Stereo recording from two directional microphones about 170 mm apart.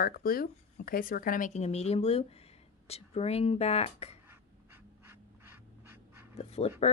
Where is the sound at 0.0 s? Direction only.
60° left (ahead or behind); by 4.2 s 35° left (ahead or behind).